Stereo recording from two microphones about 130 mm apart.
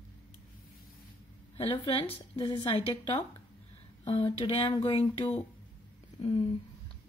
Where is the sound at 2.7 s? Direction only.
45° left (ahead or behind).